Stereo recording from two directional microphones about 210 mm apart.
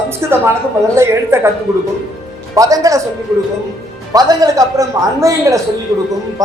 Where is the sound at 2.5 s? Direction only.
15° right (ahead or behind).